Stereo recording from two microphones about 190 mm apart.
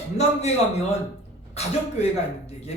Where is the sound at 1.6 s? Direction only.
35° left (ahead or behind).